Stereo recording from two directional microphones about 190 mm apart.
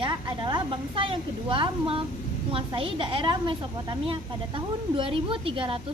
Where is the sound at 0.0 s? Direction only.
25° right (ahead or behind).